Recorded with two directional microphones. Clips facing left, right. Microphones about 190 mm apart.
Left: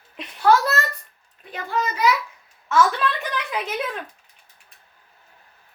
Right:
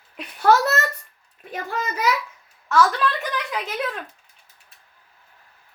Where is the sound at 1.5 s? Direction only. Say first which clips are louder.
Left 2 dB; 45° right (ahead or behind).